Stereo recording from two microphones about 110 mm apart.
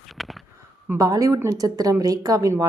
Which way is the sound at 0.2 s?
Centre (ahead or behind).